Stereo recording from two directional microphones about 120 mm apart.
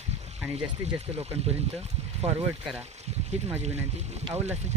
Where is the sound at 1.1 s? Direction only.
60° right (ahead or behind).